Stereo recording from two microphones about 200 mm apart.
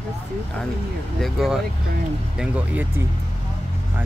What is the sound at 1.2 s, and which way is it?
Speech, centre (ahead or behind).